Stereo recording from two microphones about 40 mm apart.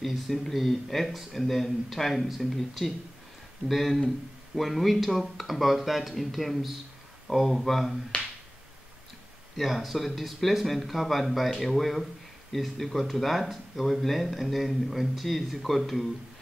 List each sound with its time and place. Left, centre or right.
0.0 s speech: centre
8.1 s finger snapping: left
9.6 s speech: centre